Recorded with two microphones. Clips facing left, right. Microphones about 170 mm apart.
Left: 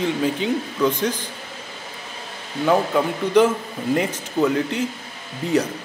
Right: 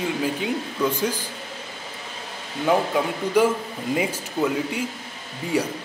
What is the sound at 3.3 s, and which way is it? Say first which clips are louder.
Speech: left 3 dB; 10° right (ahead or behind).